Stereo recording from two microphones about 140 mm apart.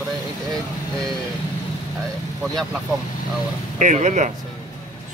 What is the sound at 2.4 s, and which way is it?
Speech, centre (ahead or behind).